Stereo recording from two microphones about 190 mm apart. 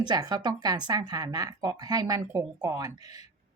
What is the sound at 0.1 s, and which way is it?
A woman's voice, 20° right (ahead or behind).